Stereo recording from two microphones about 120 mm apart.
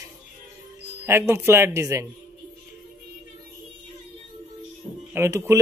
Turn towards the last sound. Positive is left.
turn(degrees=-25)  # may be behind; listen again after turning